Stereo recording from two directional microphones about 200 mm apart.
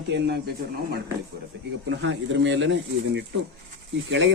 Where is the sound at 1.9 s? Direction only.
65° right (ahead or behind).